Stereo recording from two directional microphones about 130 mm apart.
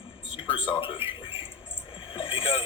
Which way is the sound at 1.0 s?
45° left (ahead or behind).